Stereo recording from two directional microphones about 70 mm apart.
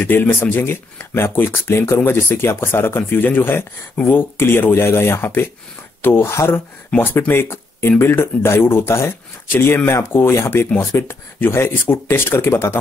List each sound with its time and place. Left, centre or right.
0.0 s speech: left
7.0 s speech: left